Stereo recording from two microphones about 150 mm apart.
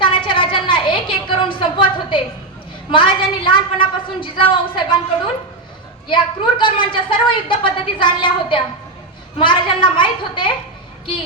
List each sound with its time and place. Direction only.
0.0 s a sound: 35° left (ahead or behind)
2.9 s a woman's voice: 35° left (ahead or behind)
6.6 s a woman's voice: 35° left (ahead or behind)